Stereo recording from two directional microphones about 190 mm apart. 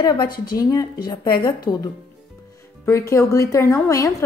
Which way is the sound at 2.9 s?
15° left (ahead or behind).